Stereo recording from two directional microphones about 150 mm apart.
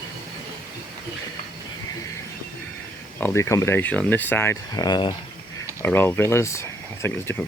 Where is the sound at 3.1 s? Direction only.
15° left (ahead or behind).